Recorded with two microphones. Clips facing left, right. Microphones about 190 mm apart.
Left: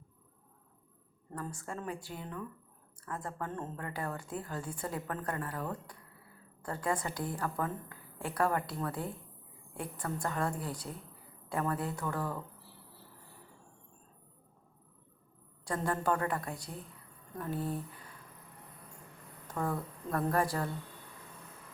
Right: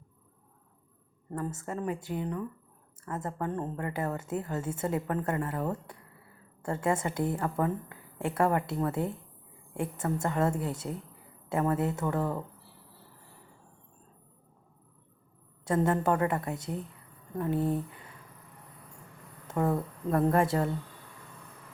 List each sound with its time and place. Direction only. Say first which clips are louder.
1.3 s a woman's voice: right 6 dB; 20° right (ahead or behind)
15.6 s a woman's voice: right 6 dB; 20° right (ahead or behind)
19.5 s a woman's voice: right 7 dB; 25° right (ahead or behind)